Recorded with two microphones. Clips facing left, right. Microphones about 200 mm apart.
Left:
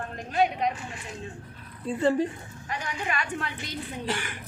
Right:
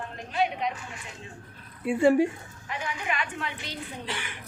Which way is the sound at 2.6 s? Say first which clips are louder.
Even; 40° left (ahead or behind).